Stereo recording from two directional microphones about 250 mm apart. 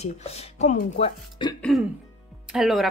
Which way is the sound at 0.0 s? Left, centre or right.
Left.